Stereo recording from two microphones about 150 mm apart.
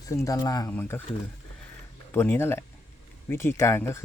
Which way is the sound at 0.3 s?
25° left (ahead or behind).